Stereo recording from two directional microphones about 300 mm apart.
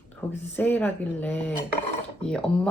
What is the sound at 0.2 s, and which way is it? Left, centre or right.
Speech, centre.